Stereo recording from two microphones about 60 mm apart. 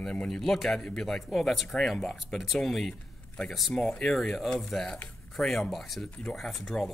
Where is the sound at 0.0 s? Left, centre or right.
Centre.